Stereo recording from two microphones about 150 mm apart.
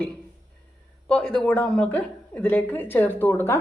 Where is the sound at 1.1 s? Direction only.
5° left (ahead or behind).